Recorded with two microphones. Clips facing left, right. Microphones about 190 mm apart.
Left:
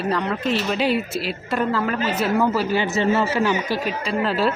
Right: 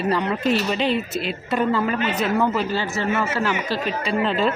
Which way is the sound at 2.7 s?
20° left (ahead or behind).